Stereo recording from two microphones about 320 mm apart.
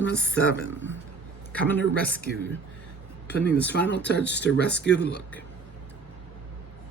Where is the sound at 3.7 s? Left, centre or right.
Left.